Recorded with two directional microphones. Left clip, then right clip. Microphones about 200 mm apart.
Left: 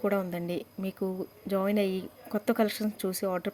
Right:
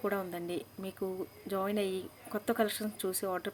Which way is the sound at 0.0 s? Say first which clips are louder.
Left 5 dB; 45° left (ahead or behind).